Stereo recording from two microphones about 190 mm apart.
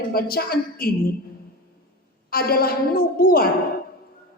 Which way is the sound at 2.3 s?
50° left (ahead or behind).